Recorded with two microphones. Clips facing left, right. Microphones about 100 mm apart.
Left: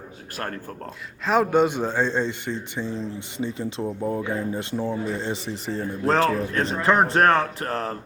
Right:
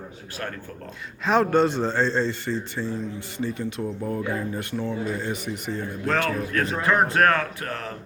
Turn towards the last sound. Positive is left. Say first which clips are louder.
# left 4 dB
turn(degrees=35)  # may be behind; listen again after turning